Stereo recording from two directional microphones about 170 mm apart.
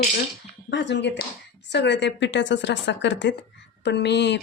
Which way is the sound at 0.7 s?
90° left.